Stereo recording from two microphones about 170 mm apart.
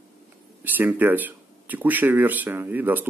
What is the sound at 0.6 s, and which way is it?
Speech, 10° right (ahead or behind).